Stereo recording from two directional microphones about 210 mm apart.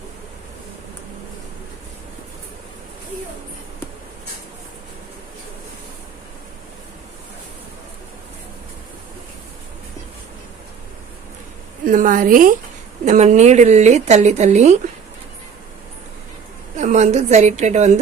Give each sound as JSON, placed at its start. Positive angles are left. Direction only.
{"t": 11.9, "sound": "speech", "side_deg": -40}
{"t": 16.7, "sound": "speech", "side_deg": -35}